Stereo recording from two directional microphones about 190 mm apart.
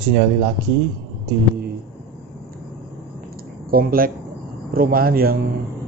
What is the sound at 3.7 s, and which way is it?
A man's voice, 50° right (ahead or behind).